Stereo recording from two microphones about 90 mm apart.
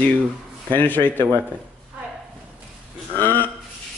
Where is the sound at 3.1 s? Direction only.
20° left (ahead or behind).